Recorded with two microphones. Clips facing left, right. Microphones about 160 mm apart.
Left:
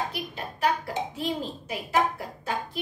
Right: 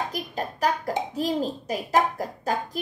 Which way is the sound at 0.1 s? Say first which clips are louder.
Right 4 dB; 40° right (ahead or behind).